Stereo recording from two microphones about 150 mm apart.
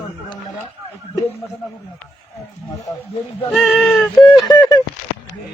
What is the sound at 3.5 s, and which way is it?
Speech, centre (ahead or behind).